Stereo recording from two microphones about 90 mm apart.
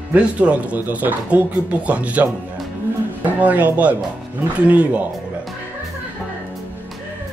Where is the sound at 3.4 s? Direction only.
15° right (ahead or behind).